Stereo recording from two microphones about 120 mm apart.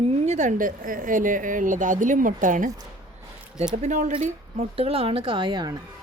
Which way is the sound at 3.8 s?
85° right.